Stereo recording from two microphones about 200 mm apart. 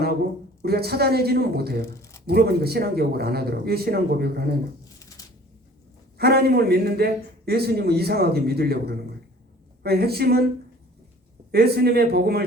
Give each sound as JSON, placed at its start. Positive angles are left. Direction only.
{"t": 0.6, "sound": "a man's voice", "side_deg": -50}
{"t": 4.9, "sound": "a sound", "side_deg": 15}
{"t": 6.1, "sound": "a man's voice", "side_deg": -50}
{"t": 11.5, "sound": "a man's voice", "side_deg": -50}